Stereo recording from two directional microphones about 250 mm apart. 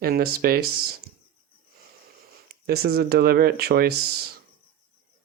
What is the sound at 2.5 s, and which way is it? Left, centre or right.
Speech, right.